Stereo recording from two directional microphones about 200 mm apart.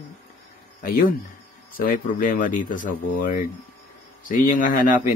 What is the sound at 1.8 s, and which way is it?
Mantra, 45° left (ahead or behind).